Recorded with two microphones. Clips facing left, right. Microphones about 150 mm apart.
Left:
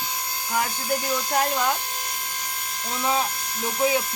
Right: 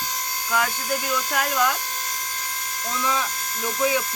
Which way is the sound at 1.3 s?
30° left (ahead or behind).